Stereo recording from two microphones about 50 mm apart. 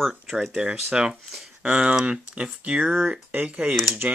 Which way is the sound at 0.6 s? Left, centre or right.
Centre.